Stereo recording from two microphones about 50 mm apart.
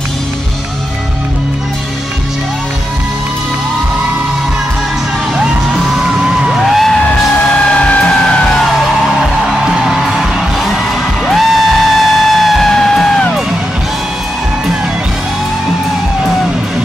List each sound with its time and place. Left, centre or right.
6.5 s music: centre
7.7 s music: left
9.5 s music: centre